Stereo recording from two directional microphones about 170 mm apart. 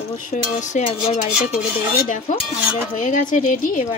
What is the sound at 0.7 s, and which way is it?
Speech, 40° left (ahead or behind).